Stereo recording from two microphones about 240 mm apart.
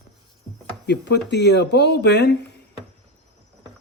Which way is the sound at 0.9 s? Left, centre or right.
Left.